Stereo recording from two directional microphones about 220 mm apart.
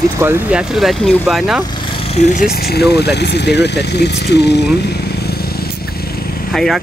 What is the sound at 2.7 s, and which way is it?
Speech, 45° left (ahead or behind).